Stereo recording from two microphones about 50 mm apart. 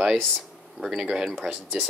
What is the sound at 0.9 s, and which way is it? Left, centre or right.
Speech, centre.